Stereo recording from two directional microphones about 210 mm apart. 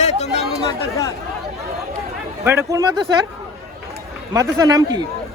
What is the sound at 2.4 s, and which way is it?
Speech, 15° right (ahead or behind).